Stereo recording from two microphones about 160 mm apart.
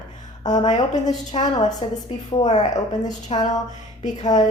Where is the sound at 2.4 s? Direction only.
40° left (ahead or behind).